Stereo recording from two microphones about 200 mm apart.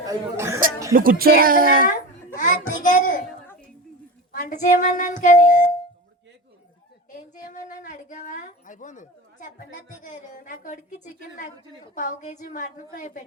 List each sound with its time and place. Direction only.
0.0 s speech: 15° right (ahead or behind)
0.9 s speech: 45° right (ahead or behind)
1.9 s a child's voice: 40° left (ahead or behind)
3.2 s a sound: 10° left (ahead or behind)
4.3 s a woman's voice: 40° left (ahead or behind)
7.1 s a sound: 40° left (ahead or behind)
10.0 s a woman's voice: 40° left (ahead or behind)